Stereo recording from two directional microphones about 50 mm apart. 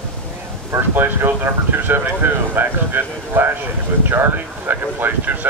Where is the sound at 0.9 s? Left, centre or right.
Right.